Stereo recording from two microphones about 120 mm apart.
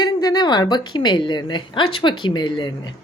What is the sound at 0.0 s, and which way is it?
A woman's voice, 30° left (ahead or behind).